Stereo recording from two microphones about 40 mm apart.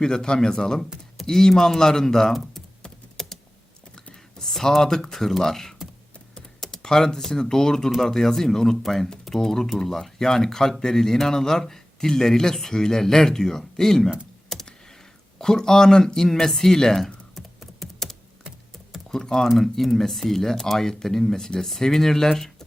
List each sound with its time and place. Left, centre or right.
0.0 s speech: centre
3.2 s typing: centre
3.9 s computer keyboard: centre
4.8 s speech: centre
15.4 s speech: centre
17.3 s typing: centre
19.1 s speech: centre